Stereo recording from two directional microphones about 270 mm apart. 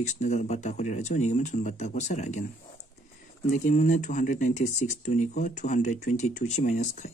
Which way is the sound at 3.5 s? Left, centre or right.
Left.